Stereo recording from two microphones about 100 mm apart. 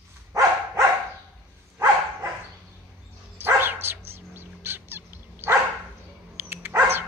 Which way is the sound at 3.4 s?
20° right (ahead or behind).